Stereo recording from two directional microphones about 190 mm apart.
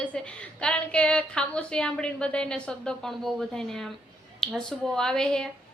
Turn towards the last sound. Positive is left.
turn(degrees=5)  # may be behind; listen again after turning